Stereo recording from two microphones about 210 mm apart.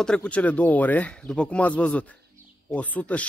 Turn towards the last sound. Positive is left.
turn(degrees=5)  # may be behind; listen again after turning